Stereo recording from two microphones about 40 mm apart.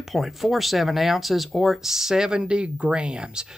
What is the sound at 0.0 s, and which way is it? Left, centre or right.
Speech, centre.